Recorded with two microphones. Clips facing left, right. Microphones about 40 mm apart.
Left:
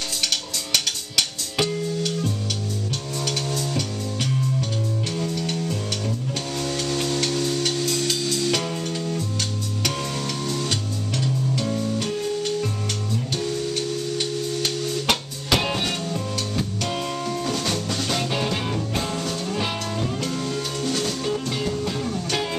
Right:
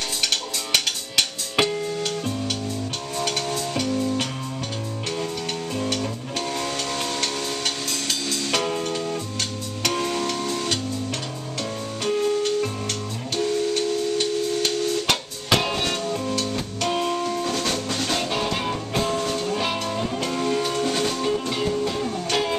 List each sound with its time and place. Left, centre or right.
0.3 s music: centre
7.3 s music: centre